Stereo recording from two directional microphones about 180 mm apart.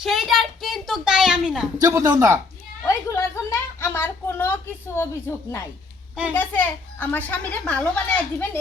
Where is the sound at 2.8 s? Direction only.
15° left (ahead or behind).